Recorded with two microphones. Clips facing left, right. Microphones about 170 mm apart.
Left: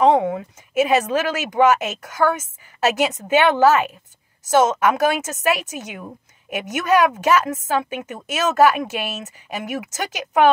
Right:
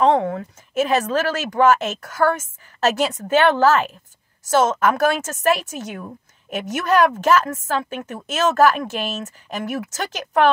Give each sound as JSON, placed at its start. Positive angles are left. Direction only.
{"t": 0.0, "sound": "a woman's voice", "side_deg": 15}